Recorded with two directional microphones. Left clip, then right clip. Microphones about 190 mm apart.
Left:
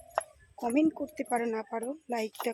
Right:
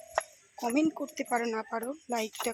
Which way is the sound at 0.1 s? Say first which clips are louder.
Right 1 dB; 10° right (ahead or behind).